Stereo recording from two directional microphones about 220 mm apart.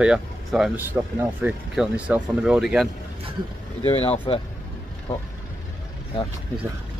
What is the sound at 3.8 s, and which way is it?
Speech, 25° left (ahead or behind).